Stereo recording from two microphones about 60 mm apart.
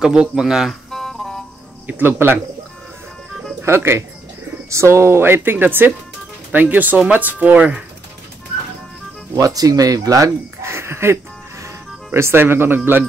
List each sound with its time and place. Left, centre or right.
0.0 s speech: centre
0.8 s music: centre
1.9 s speech: right
3.6 s speech: right
9.3 s speech: right